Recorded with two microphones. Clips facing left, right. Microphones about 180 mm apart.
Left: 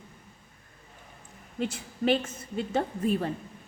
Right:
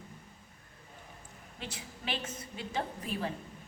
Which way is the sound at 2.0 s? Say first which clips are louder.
Left 12 dB; 50° left (ahead or behind).